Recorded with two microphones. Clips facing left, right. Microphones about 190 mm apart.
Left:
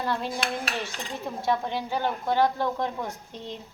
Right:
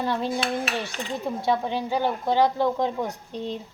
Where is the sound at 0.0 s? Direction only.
15° right (ahead or behind).